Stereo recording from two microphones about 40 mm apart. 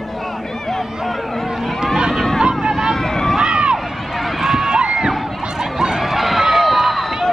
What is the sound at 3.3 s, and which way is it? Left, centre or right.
Run, right.